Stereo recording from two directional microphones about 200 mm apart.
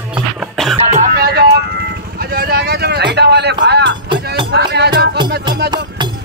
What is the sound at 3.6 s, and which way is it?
Music, 60° right (ahead or behind).